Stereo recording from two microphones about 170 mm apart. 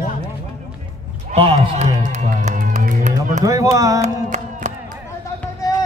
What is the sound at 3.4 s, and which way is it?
Speech, 20° right (ahead or behind).